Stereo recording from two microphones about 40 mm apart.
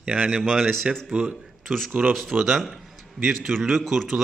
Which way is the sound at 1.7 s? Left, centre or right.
Centre.